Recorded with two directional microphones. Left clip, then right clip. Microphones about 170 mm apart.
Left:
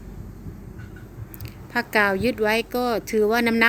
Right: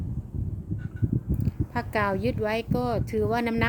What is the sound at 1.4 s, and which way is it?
Speech, centre (ahead or behind).